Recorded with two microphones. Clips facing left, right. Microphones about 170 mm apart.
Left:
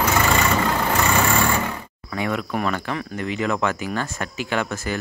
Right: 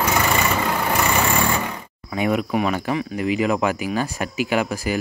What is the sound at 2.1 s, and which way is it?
Cricket, 20° right (ahead or behind).